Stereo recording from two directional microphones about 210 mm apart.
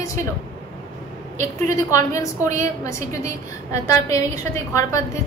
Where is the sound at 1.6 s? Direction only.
15° left (ahead or behind).